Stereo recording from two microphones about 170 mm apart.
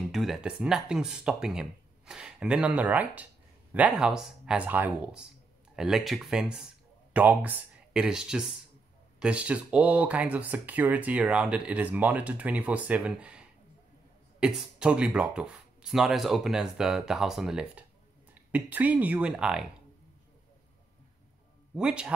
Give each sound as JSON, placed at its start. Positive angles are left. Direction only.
{"t": 0.1, "sound": "speech", "side_deg": 0}
{"t": 21.7, "sound": "speech", "side_deg": -5}